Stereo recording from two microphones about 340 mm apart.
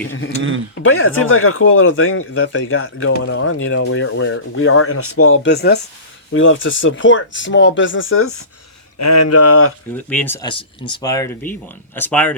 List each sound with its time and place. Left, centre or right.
0.9 s speech: left
9.0 s speech: left
9.9 s speech: centre